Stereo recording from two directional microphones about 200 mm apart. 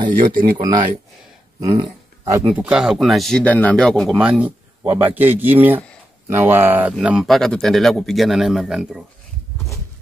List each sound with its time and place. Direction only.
0.1 s speech: 40° right (ahead or behind)
0.6 s speech: 20° right (ahead or behind)
2.4 s speech: 5° right (ahead or behind)